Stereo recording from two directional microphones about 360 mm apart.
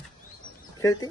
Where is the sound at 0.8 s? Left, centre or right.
Centre.